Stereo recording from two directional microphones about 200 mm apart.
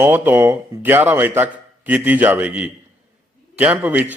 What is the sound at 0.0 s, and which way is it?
A man's voice, 10° right (ahead or behind).